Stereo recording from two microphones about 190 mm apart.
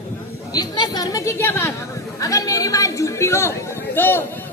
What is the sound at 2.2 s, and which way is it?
A woman's voice, 15° left (ahead or behind).